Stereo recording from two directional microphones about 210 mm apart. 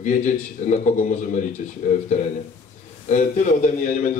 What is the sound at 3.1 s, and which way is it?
A man's voice, 35° left (ahead or behind).